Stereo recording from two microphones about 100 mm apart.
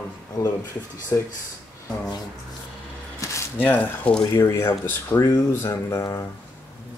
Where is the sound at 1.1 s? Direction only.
30° left (ahead or behind).